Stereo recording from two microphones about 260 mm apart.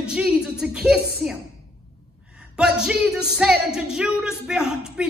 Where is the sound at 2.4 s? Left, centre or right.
Centre.